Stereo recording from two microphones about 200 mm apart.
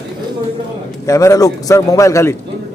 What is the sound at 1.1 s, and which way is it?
A man's voice, 15° left (ahead or behind).